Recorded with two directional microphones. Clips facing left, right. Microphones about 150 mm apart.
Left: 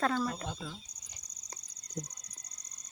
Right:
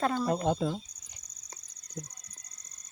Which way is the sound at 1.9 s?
20° left (ahead or behind).